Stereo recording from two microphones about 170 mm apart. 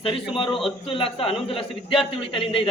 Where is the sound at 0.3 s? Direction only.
30° left (ahead or behind).